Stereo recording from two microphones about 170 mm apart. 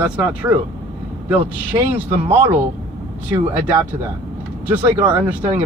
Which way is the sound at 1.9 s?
15° right (ahead or behind).